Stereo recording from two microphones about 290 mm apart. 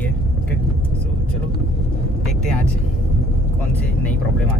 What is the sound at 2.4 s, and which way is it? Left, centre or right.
Speech, centre.